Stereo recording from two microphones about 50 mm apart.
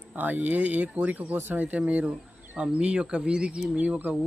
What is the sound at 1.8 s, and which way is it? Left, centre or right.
Speech, right.